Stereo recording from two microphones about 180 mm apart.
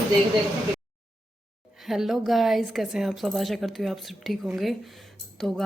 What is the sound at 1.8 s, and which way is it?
A woman's voice, centre (ahead or behind).